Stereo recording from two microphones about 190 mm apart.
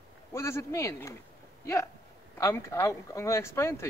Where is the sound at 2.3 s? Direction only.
15° left (ahead or behind).